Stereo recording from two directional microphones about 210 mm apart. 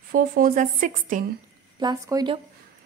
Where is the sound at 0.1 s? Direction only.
40° right (ahead or behind).